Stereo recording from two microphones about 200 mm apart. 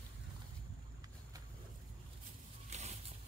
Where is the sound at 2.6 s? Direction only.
35° right (ahead or behind).